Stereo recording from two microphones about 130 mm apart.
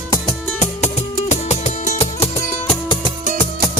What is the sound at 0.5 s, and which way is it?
Music, 60° left (ahead or behind).